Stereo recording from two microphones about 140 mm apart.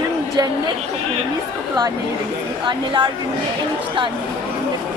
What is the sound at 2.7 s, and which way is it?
Speech, 35° right (ahead or behind).